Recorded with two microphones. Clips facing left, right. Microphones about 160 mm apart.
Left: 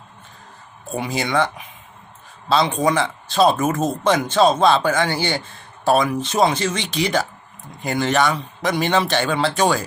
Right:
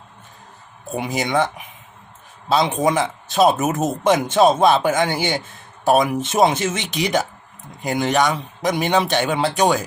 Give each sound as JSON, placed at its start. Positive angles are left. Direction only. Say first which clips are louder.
{"t": 0.9, "sound": "a man's voice", "louder": "right 1 dB", "side_deg": -20}